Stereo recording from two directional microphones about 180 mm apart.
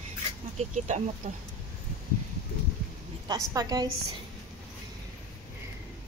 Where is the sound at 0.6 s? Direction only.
40° right (ahead or behind).